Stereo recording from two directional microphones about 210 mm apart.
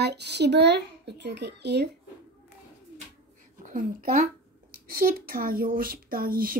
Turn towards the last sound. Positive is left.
turn(degrees=-45)  # may be behind; listen again after turning